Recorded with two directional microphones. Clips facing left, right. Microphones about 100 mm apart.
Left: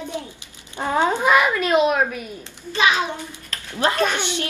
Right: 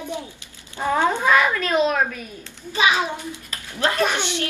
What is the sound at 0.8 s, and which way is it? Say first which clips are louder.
Speech: even; 15° left (ahead or behind).